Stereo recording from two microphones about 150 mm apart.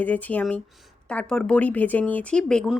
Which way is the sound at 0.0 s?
10° left (ahead or behind).